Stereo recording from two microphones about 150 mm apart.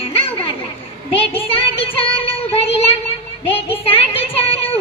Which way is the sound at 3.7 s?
35° left (ahead or behind).